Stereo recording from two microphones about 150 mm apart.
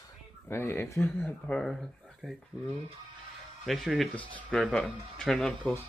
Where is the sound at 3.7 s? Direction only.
Centre (ahead or behind).